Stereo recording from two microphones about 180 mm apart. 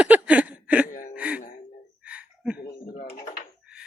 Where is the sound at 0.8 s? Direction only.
50° left (ahead or behind).